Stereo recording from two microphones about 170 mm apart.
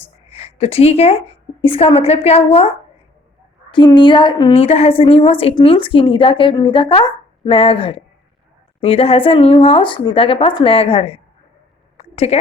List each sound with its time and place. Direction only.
0.0 s a woman's voice: 40° left (ahead or behind)
3.7 s a woman's voice: 25° left (ahead or behind)
11.9 s a sound: 40° left (ahead or behind)